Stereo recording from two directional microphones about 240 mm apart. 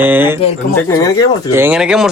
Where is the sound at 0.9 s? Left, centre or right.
Centre.